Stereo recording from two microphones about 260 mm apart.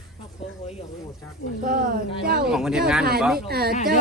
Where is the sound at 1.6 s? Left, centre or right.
Right.